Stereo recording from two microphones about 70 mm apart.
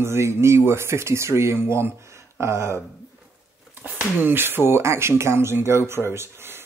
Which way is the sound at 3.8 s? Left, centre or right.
Right.